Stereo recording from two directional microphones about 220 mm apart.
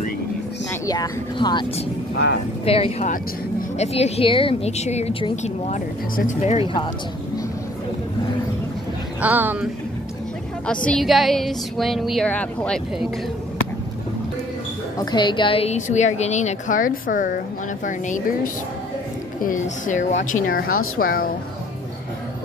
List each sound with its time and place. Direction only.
0.8 s speech: 15° left (ahead or behind)
9.2 s speech: 10° right (ahead or behind)
10.7 s a woman's voice: 5° left (ahead or behind)
15.0 s a woman's voice: 20° left (ahead or behind); by 20.7 s 40° left (ahead or behind)
20.7 s speech: 70° left (ahead or behind)
21.0 s a woman's voice: 40° left (ahead or behind)